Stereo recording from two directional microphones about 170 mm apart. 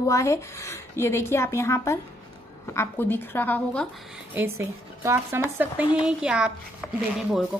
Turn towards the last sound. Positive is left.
turn(degrees=-5)  # may be behind; listen again after turning